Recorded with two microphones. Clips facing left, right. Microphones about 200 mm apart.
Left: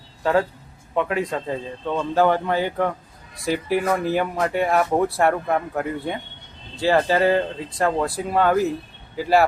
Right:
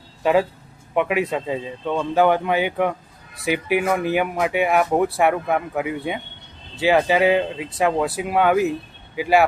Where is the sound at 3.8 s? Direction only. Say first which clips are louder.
Right 1 dB; 10° right (ahead or behind).